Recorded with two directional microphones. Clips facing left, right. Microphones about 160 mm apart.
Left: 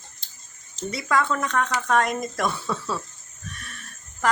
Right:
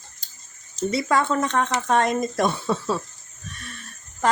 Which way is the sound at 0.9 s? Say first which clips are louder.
Right 2 dB; 30° right (ahead or behind).